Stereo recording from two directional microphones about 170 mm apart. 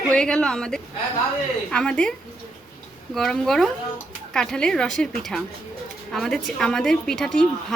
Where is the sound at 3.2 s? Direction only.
5° left (ahead or behind).